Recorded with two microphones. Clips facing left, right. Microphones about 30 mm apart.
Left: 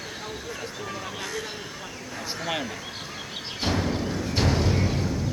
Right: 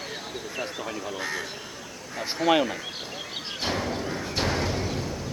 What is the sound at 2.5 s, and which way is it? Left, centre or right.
Speech, right.